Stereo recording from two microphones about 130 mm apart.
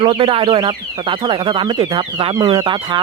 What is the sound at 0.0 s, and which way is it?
Speech, 45° right (ahead or behind).